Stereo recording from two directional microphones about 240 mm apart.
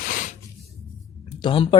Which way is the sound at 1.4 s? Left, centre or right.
Left.